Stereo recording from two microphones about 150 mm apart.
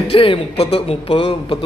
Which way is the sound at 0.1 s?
35° left (ahead or behind).